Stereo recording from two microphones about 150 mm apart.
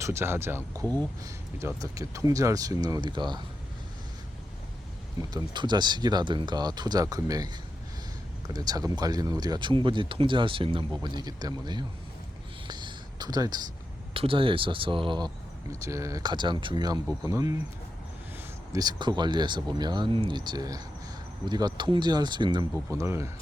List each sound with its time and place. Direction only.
0.0 s speech: 15° right (ahead or behind)
5.3 s speech: 30° right (ahead or behind)
8.5 s speech: 25° right (ahead or behind)
12.6 s a sound: 30° right (ahead or behind)
14.1 s speech: 40° right (ahead or behind)
15.7 s speech: 20° right (ahead or behind)
18.7 s speech: 25° right (ahead or behind)
22.7 s speech: 20° right (ahead or behind)